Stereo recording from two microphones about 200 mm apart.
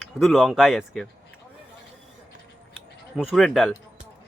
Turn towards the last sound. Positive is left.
turn(degrees=0)  # may be behind; listen again after turning